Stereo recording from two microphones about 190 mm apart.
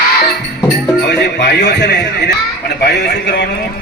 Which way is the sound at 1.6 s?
65° left (ahead or behind).